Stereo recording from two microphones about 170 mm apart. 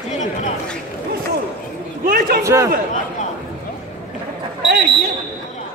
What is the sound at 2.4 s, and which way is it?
Speech, 15° right (ahead or behind).